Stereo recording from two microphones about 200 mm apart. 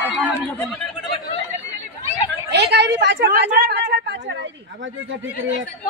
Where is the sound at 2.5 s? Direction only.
60° right (ahead or behind).